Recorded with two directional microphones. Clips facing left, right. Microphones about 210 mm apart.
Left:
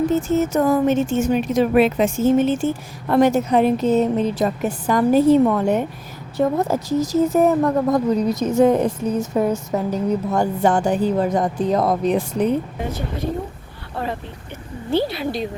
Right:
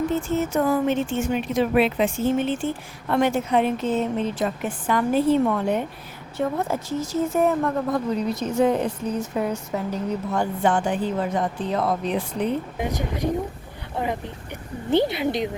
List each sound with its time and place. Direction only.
0.1 s a woman's voice: 40° left (ahead or behind)
12.9 s speech: 15° right (ahead or behind)